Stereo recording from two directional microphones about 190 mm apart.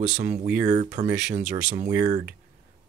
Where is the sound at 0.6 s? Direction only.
40° right (ahead or behind).